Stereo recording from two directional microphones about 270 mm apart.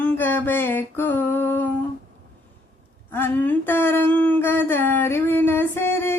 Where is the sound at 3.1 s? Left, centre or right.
Centre.